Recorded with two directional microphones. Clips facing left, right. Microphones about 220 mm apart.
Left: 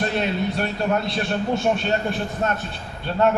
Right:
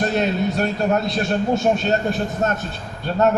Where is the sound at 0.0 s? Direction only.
45° right (ahead or behind).